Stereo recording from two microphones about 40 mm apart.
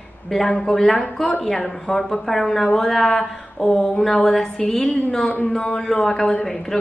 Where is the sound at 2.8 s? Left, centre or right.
Centre.